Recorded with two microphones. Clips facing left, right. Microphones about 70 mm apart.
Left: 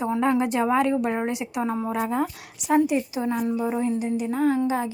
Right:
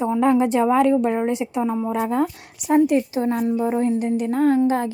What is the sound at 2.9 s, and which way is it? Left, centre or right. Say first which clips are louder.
Speech: right 5 dB; right.